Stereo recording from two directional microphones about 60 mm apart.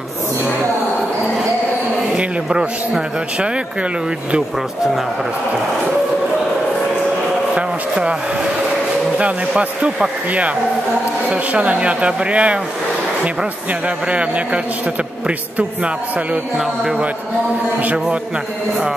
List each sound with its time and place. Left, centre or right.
2.1 s a man's voice: centre
7.5 s speech: centre
9.2 s speech: centre
11.2 s speech: right
17.8 s speech: centre